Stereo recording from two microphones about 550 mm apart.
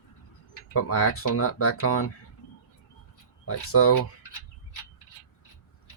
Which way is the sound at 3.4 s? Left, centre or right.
Left.